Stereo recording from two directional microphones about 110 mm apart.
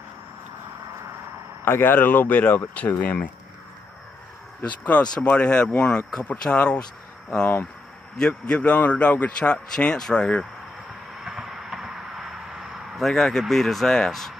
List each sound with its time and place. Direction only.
1.6 s a man's voice: 20° left (ahead or behind)
4.6 s a man's voice: 15° left (ahead or behind)
11.2 s a sound: 5° right (ahead or behind)